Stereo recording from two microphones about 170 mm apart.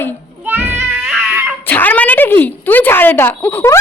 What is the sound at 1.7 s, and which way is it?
A woman's voice, 10° left (ahead or behind).